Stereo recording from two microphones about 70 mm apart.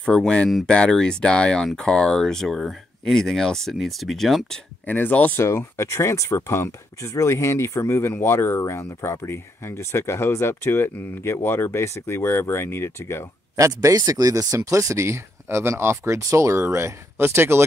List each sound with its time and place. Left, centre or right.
0.0 s speech: centre
4.8 s speech: left
5.4 s speech: left
13.6 s speech: right